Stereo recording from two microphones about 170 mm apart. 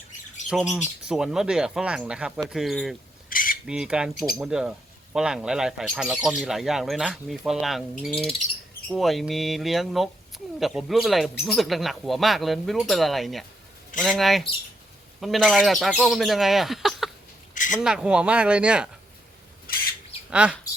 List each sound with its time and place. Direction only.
0.5 s speech: centre (ahead or behind)
3.2 s cutlery: 55° left (ahead or behind)
3.7 s speech: 5° right (ahead or behind)
17.5 s a sound: 50° left (ahead or behind)
17.8 s speech: 5° right (ahead or behind)
20.3 s speech: 5° right (ahead or behind)